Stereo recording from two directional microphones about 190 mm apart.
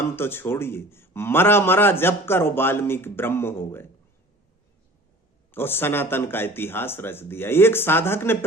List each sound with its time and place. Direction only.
0.2 s a man's voice: 10° left (ahead or behind)
5.5 s a man's voice: 10° left (ahead or behind)